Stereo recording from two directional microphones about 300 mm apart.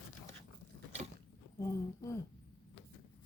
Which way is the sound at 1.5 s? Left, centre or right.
Centre.